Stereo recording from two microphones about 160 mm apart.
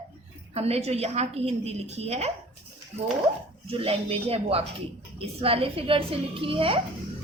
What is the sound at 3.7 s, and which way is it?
A woman's voice, 35° right (ahead or behind).